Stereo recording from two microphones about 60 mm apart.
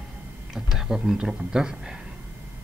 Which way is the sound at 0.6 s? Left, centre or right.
Centre.